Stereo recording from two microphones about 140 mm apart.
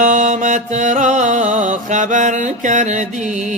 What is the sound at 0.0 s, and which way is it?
Music, 65° right (ahead or behind).